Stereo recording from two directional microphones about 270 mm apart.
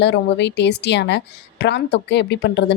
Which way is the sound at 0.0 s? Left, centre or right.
Left.